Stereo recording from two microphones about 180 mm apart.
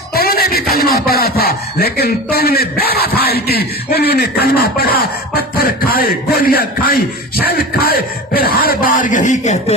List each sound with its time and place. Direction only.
0.1 s speech: 55° left (ahead or behind); by 9.7 s 40° left (ahead or behind)